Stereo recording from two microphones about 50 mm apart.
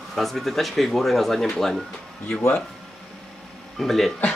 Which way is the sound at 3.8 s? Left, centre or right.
Centre.